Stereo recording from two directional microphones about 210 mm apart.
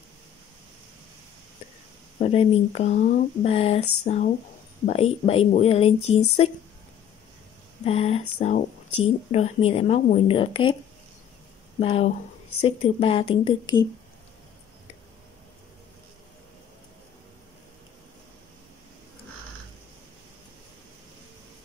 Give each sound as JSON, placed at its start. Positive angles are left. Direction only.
{"t": 2.1, "sound": "speech", "side_deg": 30}
{"t": 7.8, "sound": "speech", "side_deg": 30}
{"t": 11.8, "sound": "speech", "side_deg": 30}